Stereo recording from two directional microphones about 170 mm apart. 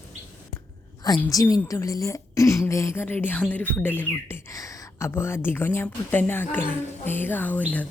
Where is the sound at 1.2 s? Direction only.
20° left (ahead or behind).